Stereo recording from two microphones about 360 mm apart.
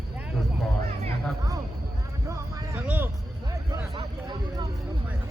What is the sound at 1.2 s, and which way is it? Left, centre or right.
Music, centre.